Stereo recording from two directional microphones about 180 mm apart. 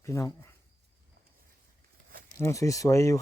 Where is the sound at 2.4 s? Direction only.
15° left (ahead or behind).